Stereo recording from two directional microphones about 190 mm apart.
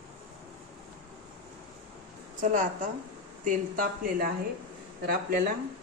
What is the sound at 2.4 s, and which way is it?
Speech, 40° right (ahead or behind).